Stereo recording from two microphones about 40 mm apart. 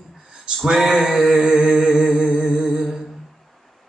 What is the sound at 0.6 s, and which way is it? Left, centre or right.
Music, centre.